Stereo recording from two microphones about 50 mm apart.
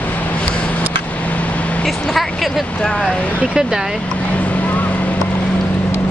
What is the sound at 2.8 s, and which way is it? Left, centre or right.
Speech, centre.